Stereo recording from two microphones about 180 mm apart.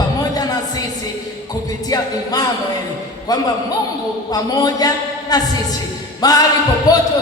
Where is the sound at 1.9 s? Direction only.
20° left (ahead or behind).